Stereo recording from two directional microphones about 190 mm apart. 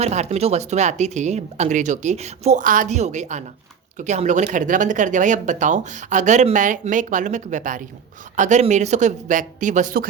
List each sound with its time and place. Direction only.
0.0 s speech: 35° right (ahead or behind)